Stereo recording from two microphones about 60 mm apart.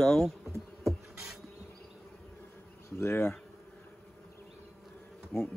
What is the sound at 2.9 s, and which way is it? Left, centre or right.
Bee, left.